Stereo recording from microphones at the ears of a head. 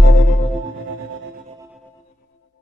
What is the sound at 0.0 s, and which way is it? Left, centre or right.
Music, left.